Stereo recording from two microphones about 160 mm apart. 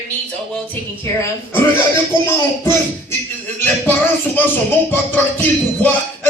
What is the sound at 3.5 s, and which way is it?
Speech, 10° left (ahead or behind).